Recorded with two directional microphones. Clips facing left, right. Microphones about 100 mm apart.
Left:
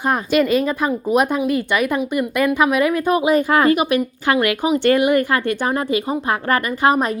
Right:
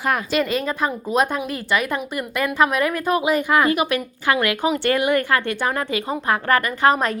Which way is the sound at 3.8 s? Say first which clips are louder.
Left 4 dB; 20° left (ahead or behind).